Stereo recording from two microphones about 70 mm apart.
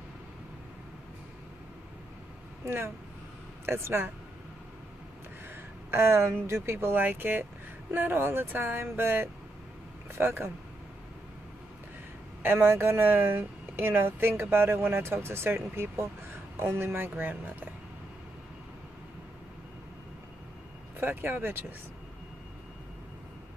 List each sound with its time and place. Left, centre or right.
2.6 s speech: right
5.9 s speech: right
12.4 s speech: right
21.0 s speech: right